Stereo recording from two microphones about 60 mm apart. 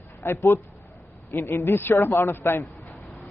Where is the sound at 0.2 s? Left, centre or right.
Left.